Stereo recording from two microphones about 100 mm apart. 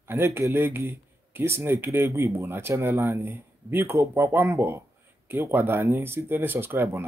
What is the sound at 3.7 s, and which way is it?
Speech, 20° right (ahead or behind).